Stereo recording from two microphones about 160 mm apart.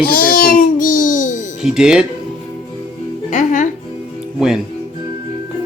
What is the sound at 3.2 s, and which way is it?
Music, 50° left (ahead or behind).